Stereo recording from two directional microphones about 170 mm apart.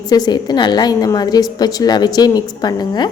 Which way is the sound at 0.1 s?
25° left (ahead or behind).